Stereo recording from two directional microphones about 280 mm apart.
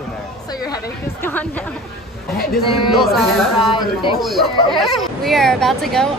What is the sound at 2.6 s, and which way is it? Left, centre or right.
Speech, centre.